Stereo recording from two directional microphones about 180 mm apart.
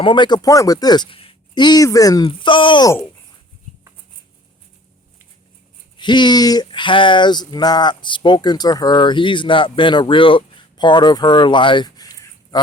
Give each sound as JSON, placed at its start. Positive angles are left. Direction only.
{"t": 0.0, "sound": "speech", "side_deg": 25}
{"t": 6.0, "sound": "speech", "side_deg": 25}